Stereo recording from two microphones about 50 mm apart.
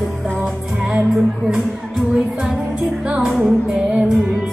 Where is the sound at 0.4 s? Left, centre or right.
Centre.